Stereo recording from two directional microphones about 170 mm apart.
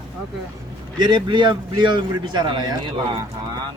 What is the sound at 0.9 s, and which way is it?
A man's voice, 25° right (ahead or behind).